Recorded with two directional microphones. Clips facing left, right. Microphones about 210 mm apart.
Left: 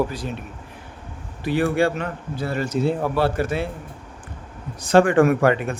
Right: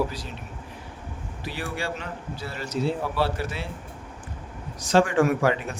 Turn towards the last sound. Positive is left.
turn(degrees=55)  # may be behind; listen again after turning